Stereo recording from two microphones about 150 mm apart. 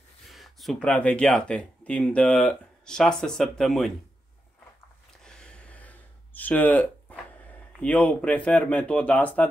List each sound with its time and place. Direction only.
0.3 s speech: centre (ahead or behind)
5.2 s a sound: 5° left (ahead or behind)
7.8 s speech: 10° left (ahead or behind)